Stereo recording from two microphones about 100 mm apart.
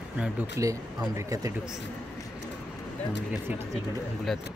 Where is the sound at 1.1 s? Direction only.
30° right (ahead or behind).